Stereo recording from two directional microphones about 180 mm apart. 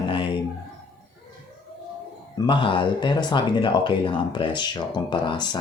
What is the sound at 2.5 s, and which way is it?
Speech, 30° left (ahead or behind).